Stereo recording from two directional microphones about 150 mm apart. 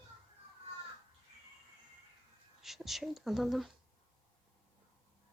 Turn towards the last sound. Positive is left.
turn(degrees=0)  # may be behind; listen again after turning